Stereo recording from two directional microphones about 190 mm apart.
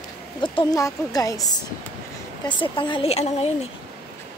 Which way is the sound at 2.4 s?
25° left (ahead or behind).